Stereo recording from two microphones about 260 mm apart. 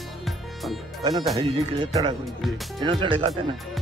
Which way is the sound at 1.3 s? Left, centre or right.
Right.